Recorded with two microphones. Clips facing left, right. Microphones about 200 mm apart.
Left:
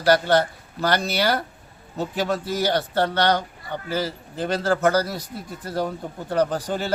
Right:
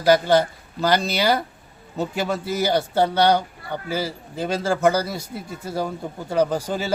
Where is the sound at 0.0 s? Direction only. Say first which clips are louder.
Right 2 dB; 10° right (ahead or behind).